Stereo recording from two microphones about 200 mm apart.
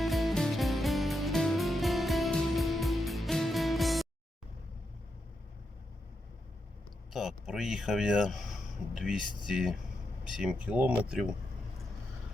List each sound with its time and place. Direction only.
0.0 s music: centre (ahead or behind)
7.1 s speech: centre (ahead or behind)